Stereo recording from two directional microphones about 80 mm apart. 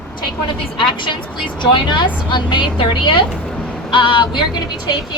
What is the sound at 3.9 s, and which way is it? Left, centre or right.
Speech, left.